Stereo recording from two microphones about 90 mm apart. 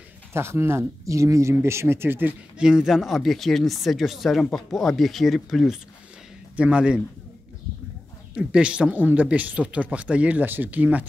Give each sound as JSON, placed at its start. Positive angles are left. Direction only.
{"t": 0.3, "sound": "speech", "side_deg": -30}
{"t": 2.6, "sound": "speech", "side_deg": -5}
{"t": 6.5, "sound": "speech", "side_deg": -15}
{"t": 8.4, "sound": "speech", "side_deg": -10}